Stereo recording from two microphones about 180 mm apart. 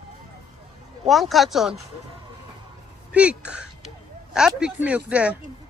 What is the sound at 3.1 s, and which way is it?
Speech, 5° right (ahead or behind).